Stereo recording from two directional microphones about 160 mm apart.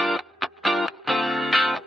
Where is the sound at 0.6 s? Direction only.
Centre (ahead or behind).